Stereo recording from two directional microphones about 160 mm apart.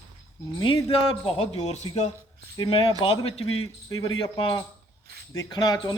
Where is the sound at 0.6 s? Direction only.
35° left (ahead or behind).